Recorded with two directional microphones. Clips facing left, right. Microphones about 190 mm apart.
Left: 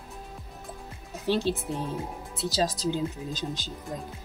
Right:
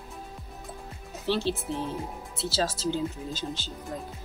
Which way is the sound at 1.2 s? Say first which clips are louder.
Left 1 dB; 15° left (ahead or behind).